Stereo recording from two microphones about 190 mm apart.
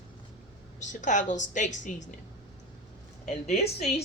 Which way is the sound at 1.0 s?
40° left (ahead or behind).